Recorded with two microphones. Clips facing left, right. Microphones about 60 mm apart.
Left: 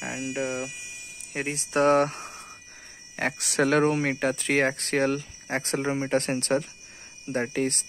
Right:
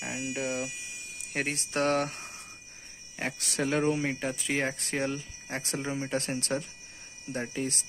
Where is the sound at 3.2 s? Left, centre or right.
Left.